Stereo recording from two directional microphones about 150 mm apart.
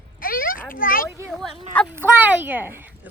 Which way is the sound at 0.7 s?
70° left (ahead or behind).